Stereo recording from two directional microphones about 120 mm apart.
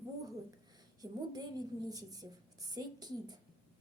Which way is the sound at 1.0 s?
30° right (ahead or behind).